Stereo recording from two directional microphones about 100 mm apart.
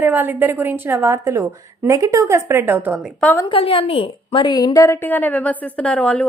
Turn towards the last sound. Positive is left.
turn(degrees=10)  # may be behind; listen again after turning